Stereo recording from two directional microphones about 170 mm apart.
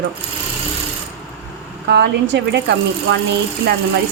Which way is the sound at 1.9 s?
85° right.